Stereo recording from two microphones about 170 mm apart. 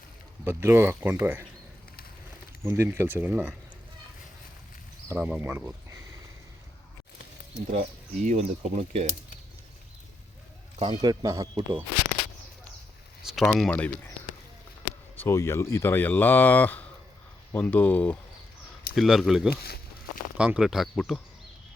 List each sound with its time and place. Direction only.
0.4 s speech: 15° right (ahead or behind)
2.6 s speech: 15° right (ahead or behind)
5.0 s speech: 10° right (ahead or behind)
7.7 s speech: 45° right (ahead or behind)
10.8 s speech: 30° right (ahead or behind)
13.2 s speech: centre (ahead or behind)
15.2 s speech: 15° left (ahead or behind); by 19.5 s centre (ahead or behind)
19.5 s speech: 65° left (ahead or behind)
20.3 s speech: 5° right (ahead or behind)